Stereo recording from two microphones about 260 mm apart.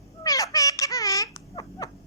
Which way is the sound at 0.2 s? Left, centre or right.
Centre.